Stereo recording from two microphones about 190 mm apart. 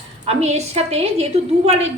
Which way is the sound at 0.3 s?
35° right (ahead or behind).